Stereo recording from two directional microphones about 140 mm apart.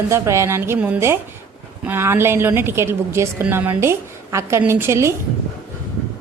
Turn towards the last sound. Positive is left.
turn(degrees=-20)  # may be behind; listen again after turning